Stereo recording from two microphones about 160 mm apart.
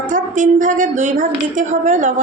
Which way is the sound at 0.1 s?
55° right (ahead or behind).